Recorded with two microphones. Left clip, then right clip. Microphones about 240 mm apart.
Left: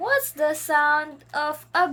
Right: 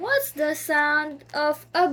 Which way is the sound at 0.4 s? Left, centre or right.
Left.